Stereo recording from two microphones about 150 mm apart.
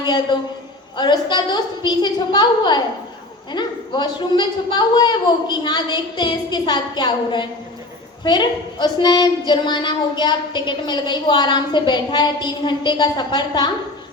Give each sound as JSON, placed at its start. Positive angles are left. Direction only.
{"t": 0.0, "sound": "a woman's voice", "side_deg": 30}